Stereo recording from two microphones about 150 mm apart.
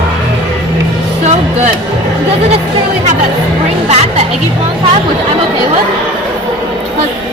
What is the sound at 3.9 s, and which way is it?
Speech, 45° right (ahead or behind).